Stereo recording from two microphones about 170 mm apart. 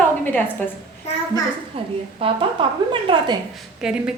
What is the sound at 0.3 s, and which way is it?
Speech, 10° left (ahead or behind).